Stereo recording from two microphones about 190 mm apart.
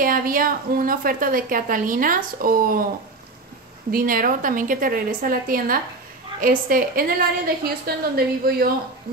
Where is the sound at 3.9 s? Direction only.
50° right (ahead or behind).